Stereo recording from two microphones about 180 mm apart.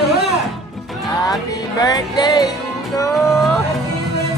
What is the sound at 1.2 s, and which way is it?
Music, 20° left (ahead or behind).